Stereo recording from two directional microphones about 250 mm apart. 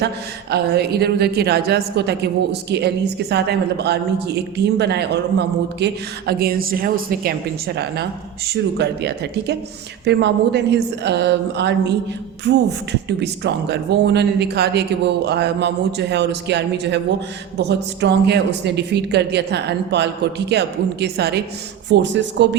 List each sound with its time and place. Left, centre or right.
0.5 s a woman's voice: right
8.4 s a woman's voice: right